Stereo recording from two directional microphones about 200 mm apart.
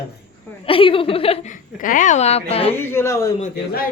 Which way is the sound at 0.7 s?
25° left (ahead or behind).